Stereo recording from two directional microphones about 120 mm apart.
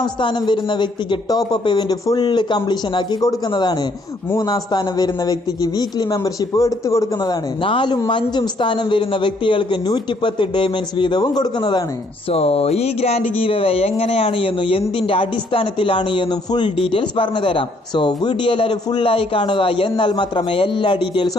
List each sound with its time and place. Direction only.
0.0 s a man's voice: 40° left (ahead or behind)
7.6 s a man's voice: 45° left (ahead or behind)
12.3 s a man's voice: 55° left (ahead or behind)